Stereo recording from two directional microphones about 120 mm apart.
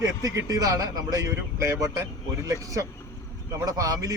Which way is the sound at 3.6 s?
30° right (ahead or behind).